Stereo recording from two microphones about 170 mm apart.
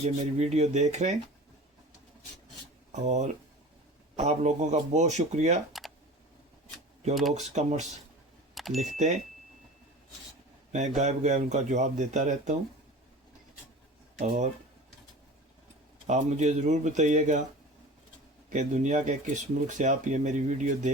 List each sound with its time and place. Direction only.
0.0 s speech: 40° right (ahead or behind)
2.9 s speech: 45° right (ahead or behind)
5.7 s computer keyboard: centre (ahead or behind)
7.1 s speech: centre (ahead or behind)
7.3 s speech: 40° right (ahead or behind)
8.5 s a sound: centre (ahead or behind)
8.9 s speech: 45° right (ahead or behind)
10.7 s speech: 45° right (ahead or behind)
14.2 s speech: 45° right (ahead or behind)
16.0 s speech: 40° right (ahead or behind)
18.5 s speech: 45° right (ahead or behind)